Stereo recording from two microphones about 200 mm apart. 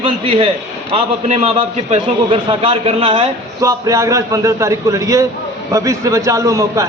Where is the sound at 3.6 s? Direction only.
15° right (ahead or behind).